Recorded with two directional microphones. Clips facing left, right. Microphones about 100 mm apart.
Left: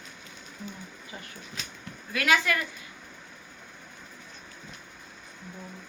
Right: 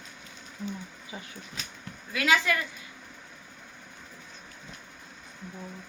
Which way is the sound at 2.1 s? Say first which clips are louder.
Even; 20° right (ahead or behind).